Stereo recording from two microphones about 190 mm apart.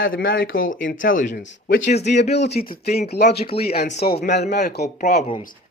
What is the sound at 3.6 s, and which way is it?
Speech, 55° left (ahead or behind).